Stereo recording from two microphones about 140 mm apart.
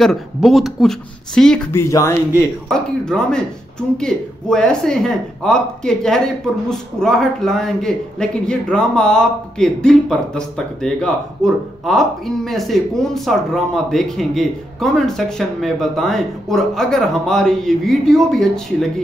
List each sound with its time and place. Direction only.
0.0 s speech: centre (ahead or behind)
1.7 s speech: 20° left (ahead or behind)
2.7 s speech: 5° left (ahead or behind)